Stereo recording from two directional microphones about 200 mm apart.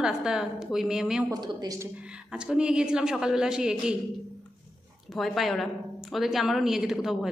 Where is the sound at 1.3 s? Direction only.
20° right (ahead or behind).